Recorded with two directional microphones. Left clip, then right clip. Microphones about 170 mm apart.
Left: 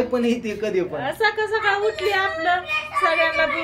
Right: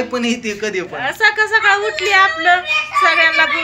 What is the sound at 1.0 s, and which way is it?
A woman's voice, 15° right (ahead or behind).